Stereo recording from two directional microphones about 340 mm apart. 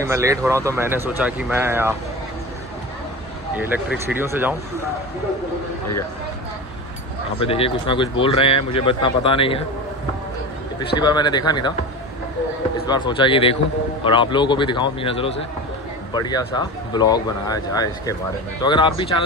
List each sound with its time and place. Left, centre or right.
0.0 s speech: centre
4.1 s speech: centre
7.4 s speech: centre
11.0 s speech: centre
12.8 s speech: centre